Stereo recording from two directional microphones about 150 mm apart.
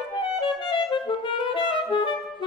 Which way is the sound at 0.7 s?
35° left (ahead or behind).